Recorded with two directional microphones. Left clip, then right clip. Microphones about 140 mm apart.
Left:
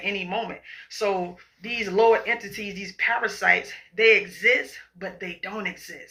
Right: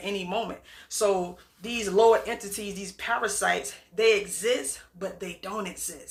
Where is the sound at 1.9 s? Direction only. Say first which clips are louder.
Left 1 dB; 40° right (ahead or behind).